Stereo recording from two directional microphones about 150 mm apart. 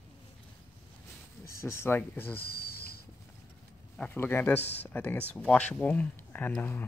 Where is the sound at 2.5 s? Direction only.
90° left.